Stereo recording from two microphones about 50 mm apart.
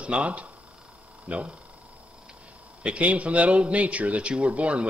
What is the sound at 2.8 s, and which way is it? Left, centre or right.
A man's voice, right.